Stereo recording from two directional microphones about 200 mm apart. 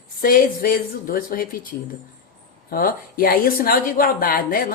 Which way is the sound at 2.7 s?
45° left (ahead or behind).